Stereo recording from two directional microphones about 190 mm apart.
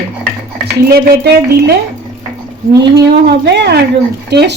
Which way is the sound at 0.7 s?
60° right (ahead or behind).